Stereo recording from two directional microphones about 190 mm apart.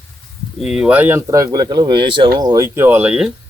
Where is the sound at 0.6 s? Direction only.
5° right (ahead or behind).